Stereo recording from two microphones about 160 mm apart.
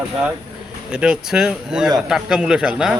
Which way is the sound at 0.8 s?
5° right (ahead or behind).